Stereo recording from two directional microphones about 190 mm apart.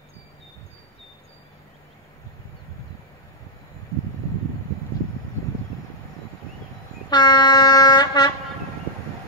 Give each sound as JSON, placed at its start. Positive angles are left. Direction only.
{"t": 7.1, "sound": "air horn", "side_deg": 20}